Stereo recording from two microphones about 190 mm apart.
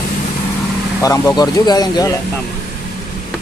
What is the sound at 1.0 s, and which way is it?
Speech, 20° left (ahead or behind).